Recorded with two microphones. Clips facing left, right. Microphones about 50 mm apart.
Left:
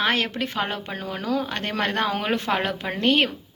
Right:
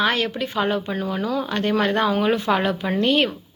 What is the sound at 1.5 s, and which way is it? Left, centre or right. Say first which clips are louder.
A woman's voice: right 5 dB; left.